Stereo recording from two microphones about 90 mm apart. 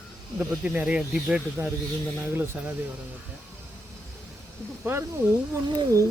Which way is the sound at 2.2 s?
20° right (ahead or behind).